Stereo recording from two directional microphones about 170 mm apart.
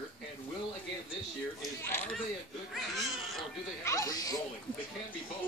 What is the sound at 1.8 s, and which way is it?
Speech, 10° left (ahead or behind).